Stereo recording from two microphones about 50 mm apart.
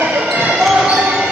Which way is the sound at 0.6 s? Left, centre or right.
Centre.